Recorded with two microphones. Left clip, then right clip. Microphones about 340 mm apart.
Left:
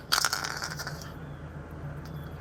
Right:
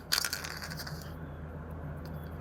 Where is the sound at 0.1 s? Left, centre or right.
Centre.